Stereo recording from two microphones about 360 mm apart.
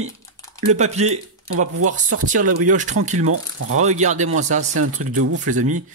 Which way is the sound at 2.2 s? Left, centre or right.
Right.